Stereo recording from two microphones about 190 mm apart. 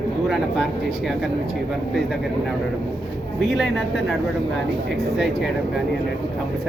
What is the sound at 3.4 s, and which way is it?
Speech, centre (ahead or behind).